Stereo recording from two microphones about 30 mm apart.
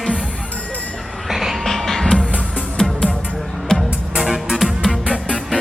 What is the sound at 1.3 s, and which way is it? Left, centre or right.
Music, centre.